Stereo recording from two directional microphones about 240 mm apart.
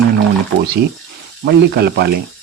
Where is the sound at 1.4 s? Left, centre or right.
Right.